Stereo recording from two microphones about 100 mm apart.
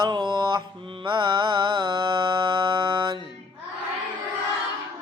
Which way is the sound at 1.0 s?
50° right (ahead or behind).